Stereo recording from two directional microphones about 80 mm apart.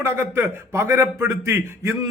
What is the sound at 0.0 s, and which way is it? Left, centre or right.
A man's voice, right.